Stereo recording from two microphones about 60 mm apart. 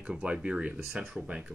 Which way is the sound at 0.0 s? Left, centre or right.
Centre.